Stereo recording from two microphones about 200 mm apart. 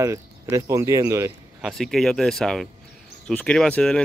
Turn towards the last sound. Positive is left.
turn(degrees=5)  # may be behind; listen again after turning